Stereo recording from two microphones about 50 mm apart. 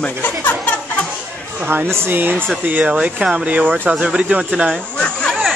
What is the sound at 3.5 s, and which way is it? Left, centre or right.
Speech, right.